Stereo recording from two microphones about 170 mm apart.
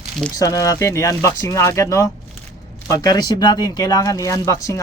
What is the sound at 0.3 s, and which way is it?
Speech, 20° left (ahead or behind).